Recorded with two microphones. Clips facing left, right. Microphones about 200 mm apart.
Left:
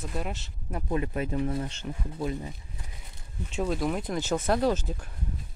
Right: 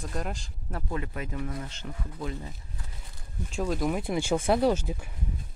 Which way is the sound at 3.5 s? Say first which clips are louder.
Even; centre (ahead or behind).